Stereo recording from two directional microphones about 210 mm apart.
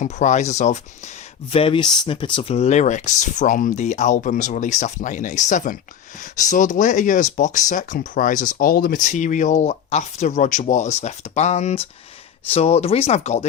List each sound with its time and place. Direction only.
0.0 s speech: 35° left (ahead or behind)